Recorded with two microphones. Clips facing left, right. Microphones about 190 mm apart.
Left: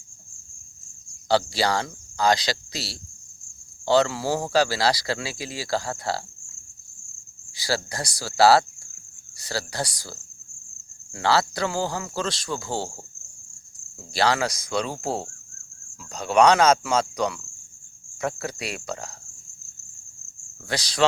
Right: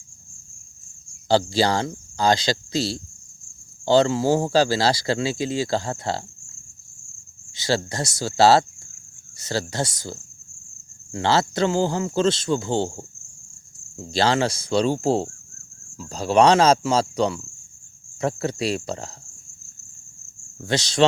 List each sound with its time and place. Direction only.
1.3 s speech: 30° right (ahead or behind)
7.5 s speech: 25° right (ahead or behind)
13.9 s speech: 25° right (ahead or behind)
20.6 s speech: 25° right (ahead or behind)